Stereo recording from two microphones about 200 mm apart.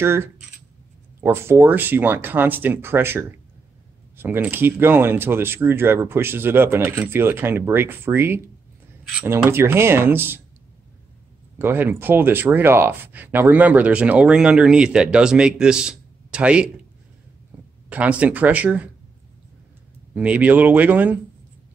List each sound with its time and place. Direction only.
0.0 s speech: 10° right (ahead or behind)
11.5 s speech: 10° right (ahead or behind)
17.8 s speech: 5° right (ahead or behind)
20.2 s speech: 5° right (ahead or behind)